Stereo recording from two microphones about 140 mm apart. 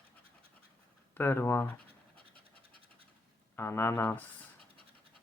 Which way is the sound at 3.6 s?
20° left (ahead or behind).